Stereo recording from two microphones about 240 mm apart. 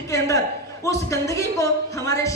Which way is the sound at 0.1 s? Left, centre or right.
Centre.